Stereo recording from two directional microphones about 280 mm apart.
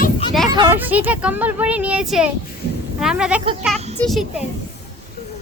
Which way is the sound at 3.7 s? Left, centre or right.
Right.